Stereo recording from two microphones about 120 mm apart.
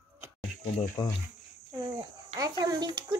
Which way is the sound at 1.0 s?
35° left (ahead or behind).